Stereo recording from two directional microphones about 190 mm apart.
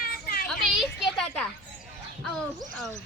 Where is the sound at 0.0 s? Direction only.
50° left (ahead or behind).